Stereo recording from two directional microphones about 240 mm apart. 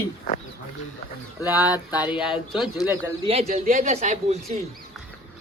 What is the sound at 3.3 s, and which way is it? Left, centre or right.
Speech, right.